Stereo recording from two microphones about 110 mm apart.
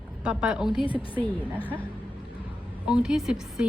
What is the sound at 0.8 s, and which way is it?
Speech, 50° left (ahead or behind).